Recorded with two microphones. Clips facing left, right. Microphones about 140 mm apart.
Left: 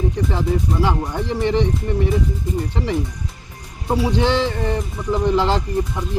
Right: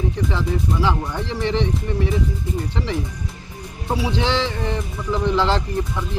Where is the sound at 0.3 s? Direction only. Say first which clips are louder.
Left 2 dB; 50° left (ahead or behind).